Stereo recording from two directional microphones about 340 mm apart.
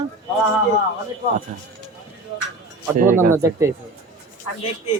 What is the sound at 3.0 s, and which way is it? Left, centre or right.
Speech, right.